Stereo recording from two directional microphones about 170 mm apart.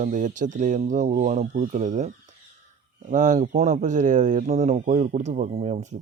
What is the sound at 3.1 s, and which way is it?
Speech, 50° right (ahead or behind).